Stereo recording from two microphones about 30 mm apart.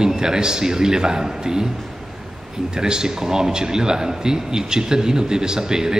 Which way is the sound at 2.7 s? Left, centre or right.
Right.